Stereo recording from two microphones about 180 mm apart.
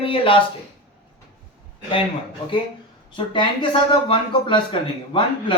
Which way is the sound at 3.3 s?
25° left (ahead or behind).